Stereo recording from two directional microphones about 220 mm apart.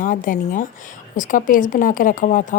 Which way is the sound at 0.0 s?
40° left (ahead or behind).